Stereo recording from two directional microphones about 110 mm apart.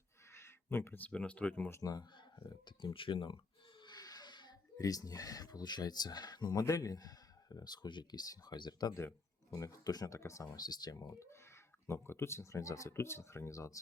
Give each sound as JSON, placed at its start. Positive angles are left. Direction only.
{"t": 0.3, "sound": "speech", "side_deg": 25}
{"t": 1.7, "sound": "speech", "side_deg": 35}